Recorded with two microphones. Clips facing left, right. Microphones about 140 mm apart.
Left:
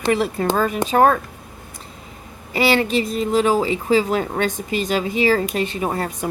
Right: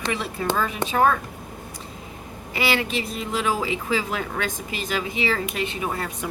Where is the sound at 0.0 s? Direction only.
45° left (ahead or behind).